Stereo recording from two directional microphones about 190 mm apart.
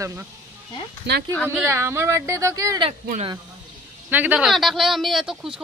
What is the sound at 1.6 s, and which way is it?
Speech, 15° right (ahead or behind).